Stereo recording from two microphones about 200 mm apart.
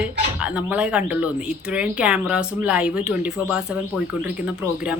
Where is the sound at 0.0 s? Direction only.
5° right (ahead or behind).